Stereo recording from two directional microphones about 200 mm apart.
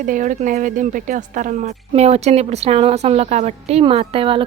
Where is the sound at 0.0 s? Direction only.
40° right (ahead or behind).